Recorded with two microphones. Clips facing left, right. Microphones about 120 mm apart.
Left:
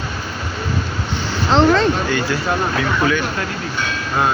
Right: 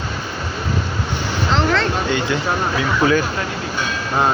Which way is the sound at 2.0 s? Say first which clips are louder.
Even; 20° right (ahead or behind).